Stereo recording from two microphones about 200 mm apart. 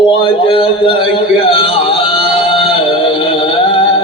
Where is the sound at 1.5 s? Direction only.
25° left (ahead or behind).